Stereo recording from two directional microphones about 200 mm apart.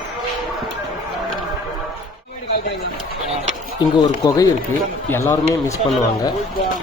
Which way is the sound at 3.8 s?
20° left (ahead or behind).